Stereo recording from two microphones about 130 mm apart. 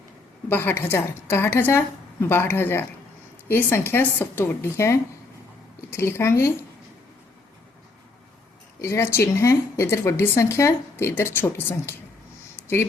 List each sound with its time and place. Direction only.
0.4 s a woman's voice: 15° left (ahead or behind)
8.8 s speech: 20° left (ahead or behind)